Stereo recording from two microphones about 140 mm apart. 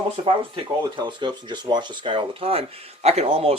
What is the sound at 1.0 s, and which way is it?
Speech, 35° right (ahead or behind).